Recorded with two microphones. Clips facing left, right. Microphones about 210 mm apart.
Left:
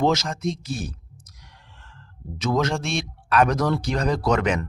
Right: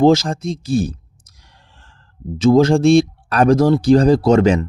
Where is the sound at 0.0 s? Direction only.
30° right (ahead or behind).